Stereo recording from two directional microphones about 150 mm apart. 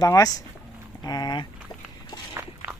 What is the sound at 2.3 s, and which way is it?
Walk, 15° right (ahead or behind).